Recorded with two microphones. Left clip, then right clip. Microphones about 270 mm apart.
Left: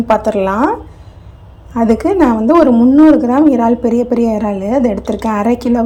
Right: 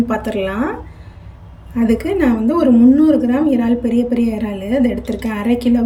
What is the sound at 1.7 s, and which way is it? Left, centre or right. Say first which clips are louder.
Speech: left 5 dB; left.